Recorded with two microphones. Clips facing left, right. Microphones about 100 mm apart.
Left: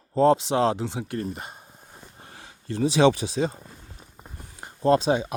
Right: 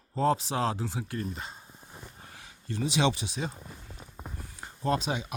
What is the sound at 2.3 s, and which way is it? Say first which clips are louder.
Speech: left 6 dB; 35° left (ahead or behind).